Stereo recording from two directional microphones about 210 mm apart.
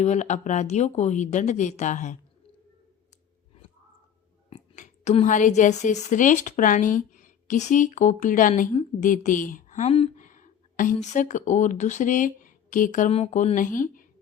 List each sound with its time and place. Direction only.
0.0 s speech: 35° left (ahead or behind)
4.4 s a woman's voice: 35° left (ahead or behind)